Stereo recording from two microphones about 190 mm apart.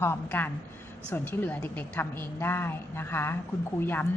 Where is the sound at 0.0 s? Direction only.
10° left (ahead or behind).